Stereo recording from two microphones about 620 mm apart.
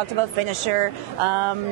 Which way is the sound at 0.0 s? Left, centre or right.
Right.